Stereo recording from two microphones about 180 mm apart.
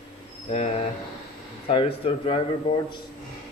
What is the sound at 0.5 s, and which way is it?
A man's voice, 35° left (ahead or behind).